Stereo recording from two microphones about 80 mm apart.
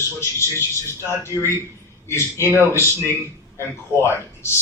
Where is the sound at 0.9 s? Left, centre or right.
Left.